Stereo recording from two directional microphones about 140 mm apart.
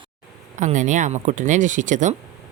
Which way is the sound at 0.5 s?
60° right (ahead or behind).